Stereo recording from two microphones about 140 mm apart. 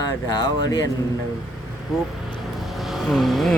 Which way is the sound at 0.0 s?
30° left (ahead or behind).